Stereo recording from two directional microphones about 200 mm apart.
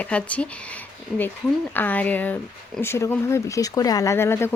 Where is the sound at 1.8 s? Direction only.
10° left (ahead or behind).